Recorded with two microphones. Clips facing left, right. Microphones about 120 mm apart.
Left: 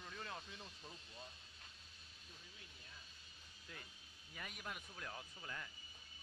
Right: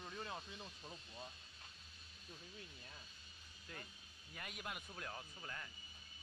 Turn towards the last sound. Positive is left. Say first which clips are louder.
# even
turn(degrees=0)  # may be behind; listen again after turning